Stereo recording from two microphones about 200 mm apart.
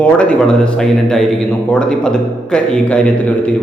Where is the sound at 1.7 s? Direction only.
5° left (ahead or behind).